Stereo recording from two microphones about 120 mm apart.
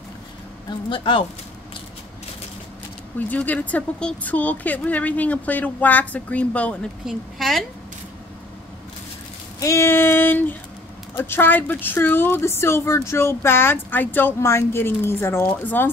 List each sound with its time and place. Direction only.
0.7 s speech: 40° left (ahead or behind)
3.2 s a woman's voice: 15° left (ahead or behind)
7.1 s a woman's voice: centre (ahead or behind)
9.6 s speech: 25° left (ahead or behind)